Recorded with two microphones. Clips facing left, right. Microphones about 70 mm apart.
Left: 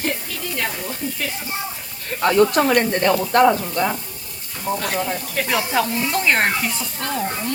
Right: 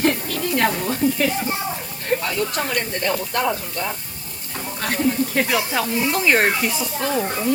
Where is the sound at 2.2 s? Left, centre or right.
Left.